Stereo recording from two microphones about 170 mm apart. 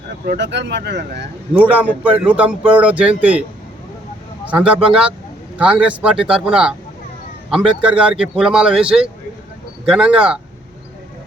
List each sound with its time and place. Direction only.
0.3 s speech: 90° right
1.5 s speech: 10° right (ahead or behind)
4.4 s a man's voice: 5° right (ahead or behind)